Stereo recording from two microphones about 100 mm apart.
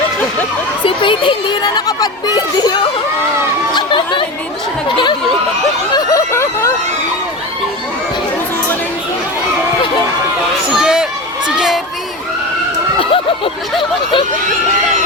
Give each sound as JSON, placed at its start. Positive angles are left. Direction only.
{"t": 0.9, "sound": "a child's voice", "side_deg": 60}
{"t": 1.6, "sound": "speech", "side_deg": 40}
{"t": 3.8, "sound": "chatter", "side_deg": 50}
{"t": 5.9, "sound": "a sound", "side_deg": 35}
{"t": 10.8, "sound": "a sound", "side_deg": -5}
{"t": 11.4, "sound": "crowd", "side_deg": -5}